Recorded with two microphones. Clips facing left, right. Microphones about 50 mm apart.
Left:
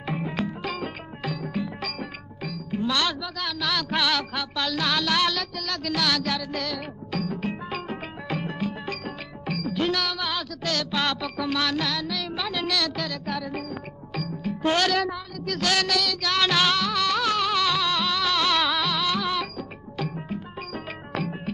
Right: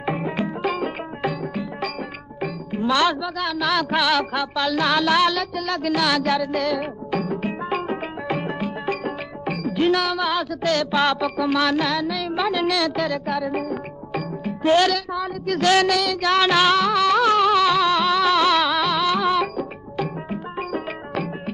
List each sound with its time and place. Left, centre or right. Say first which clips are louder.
0.0 s music: right 5 dB; centre
1.4 s speech: right 3 dB; centre
7.2 s music: right 5 dB; centre
14.6 s speech: right 6 dB; centre
15.6 s music: right 7 dB; centre